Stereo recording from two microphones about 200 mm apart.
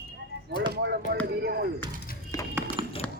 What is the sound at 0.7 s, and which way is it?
Speech, 55° right (ahead or behind).